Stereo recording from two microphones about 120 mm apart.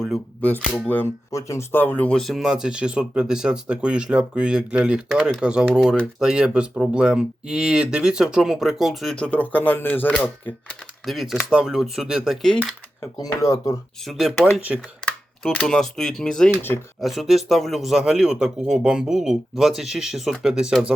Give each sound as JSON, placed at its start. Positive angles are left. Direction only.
{"t": 0.7, "sound": "speech", "side_deg": 20}
{"t": 11.0, "sound": "speech", "side_deg": 0}
{"t": 13.1, "sound": "speech", "side_deg": 30}
{"t": 14.0, "sound": "speech", "side_deg": 0}
{"t": 15.4, "sound": "speech", "side_deg": 5}